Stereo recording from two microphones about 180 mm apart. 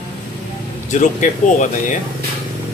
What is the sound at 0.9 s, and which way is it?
Speech, 40° left (ahead or behind).